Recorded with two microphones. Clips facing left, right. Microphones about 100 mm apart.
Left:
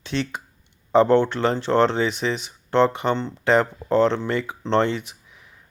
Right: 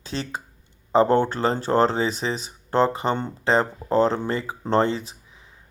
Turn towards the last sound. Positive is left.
turn(degrees=-30)  # may be behind; listen again after turning